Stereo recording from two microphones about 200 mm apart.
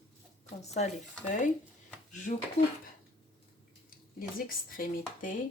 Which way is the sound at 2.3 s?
40° left (ahead or behind).